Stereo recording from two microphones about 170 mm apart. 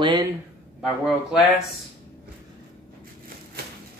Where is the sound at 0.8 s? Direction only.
5° right (ahead or behind).